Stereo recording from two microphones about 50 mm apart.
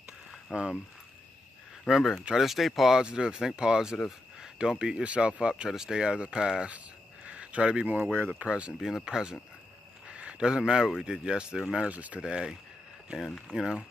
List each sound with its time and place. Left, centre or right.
0.5 s speech: centre
1.9 s speech: centre
3.0 s speech: centre
7.2 s a sound: right
7.9 s speech: right
8.3 s speech: right
8.7 s speech: centre
10.0 s speech: right
11.8 s speech: right
12.2 s speech: centre